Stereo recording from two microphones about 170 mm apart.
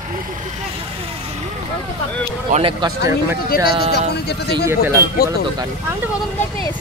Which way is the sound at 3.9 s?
70° left (ahead or behind).